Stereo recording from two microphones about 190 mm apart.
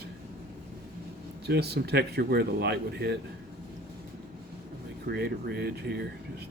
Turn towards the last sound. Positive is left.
turn(degrees=-55)  # may be behind; listen again after turning